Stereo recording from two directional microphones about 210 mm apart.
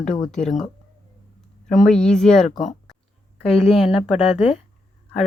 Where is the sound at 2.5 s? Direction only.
35° left (ahead or behind).